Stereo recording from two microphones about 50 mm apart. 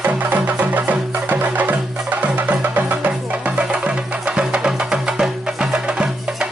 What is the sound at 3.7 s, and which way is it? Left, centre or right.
Music, centre.